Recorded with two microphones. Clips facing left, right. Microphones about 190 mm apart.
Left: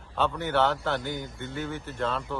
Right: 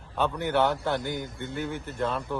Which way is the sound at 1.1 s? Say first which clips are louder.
Right 1 dB; 55° right (ahead or behind).